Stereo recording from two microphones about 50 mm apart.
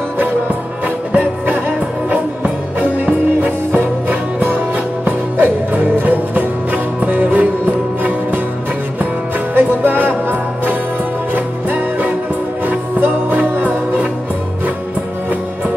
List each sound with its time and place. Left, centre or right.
0.8 s music: right
9.5 s music: right